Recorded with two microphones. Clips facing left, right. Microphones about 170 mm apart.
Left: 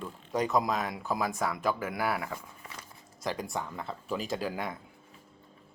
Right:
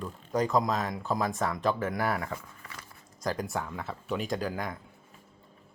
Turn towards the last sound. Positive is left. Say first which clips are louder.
# right 1 dB
turn(degrees=5)  # may be behind; listen again after turning